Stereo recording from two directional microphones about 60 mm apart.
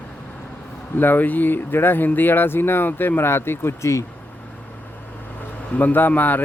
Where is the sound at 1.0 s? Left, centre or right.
Left.